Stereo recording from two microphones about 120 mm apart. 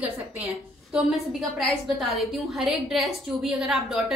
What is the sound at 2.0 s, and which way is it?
A woman's voice, centre (ahead or behind).